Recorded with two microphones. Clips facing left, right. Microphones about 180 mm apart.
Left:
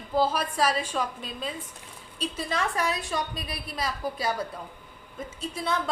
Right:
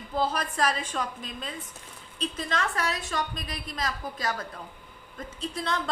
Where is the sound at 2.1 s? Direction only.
10° left (ahead or behind).